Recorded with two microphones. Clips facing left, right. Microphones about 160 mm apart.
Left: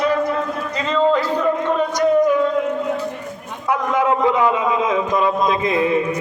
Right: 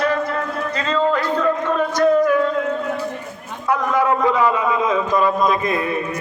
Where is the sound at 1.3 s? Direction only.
20° left (ahead or behind).